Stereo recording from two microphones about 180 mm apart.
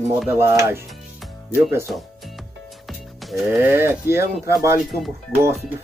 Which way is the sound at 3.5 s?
15° right (ahead or behind).